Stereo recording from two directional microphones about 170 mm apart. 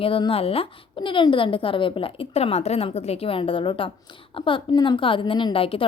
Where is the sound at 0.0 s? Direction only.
30° left (ahead or behind).